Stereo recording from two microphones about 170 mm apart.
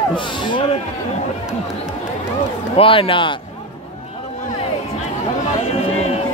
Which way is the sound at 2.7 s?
30° left (ahead or behind).